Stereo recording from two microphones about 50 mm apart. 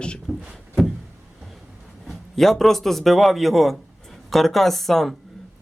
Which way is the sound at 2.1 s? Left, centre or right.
Centre.